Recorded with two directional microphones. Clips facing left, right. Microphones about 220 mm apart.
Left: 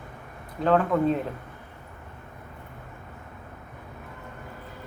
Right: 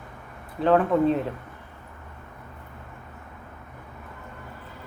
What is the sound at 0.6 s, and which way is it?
Speech, centre (ahead or behind).